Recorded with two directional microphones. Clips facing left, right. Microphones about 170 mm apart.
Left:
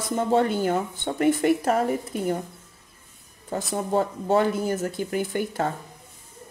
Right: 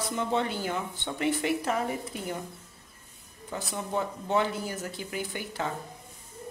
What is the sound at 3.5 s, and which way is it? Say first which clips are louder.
Speech: left 7 dB; 45° left (ahead or behind).